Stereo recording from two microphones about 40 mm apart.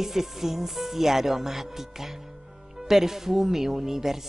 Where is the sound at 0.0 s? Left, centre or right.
Centre.